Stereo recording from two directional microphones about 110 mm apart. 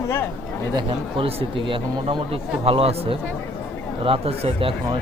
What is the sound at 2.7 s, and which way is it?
Speech, 60° right (ahead or behind).